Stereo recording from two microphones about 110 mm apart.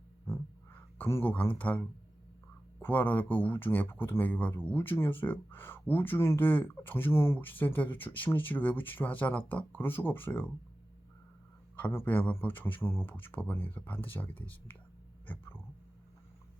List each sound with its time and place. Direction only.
0.3 s a sound: 20° left (ahead or behind)
2.8 s speech: 15° left (ahead or behind)
11.8 s speech: 20° left (ahead or behind)